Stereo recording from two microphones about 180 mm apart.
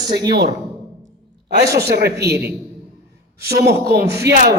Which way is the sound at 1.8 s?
60° right (ahead or behind).